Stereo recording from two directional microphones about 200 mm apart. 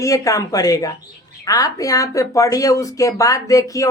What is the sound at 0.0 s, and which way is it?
Speech, 15° left (ahead or behind).